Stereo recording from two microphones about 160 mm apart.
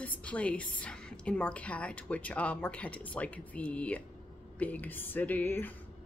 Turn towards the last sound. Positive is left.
turn(degrees=10)  # may be behind; listen again after turning